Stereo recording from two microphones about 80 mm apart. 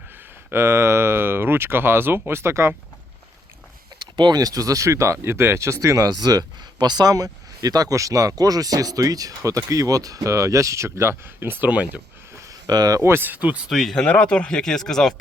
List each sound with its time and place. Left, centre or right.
0.5 s speech: right
4.0 s speech: right
12.6 s speech: right
13.0 s speech: right
13.7 s speech: centre
13.9 s speech: centre